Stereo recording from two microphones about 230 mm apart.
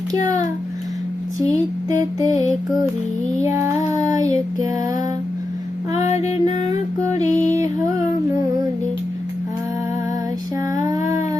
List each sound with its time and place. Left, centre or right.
1.4 s a sound: centre
3.2 s music: centre
3.9 s child singing: centre
6.0 s music: left
7.2 s music: centre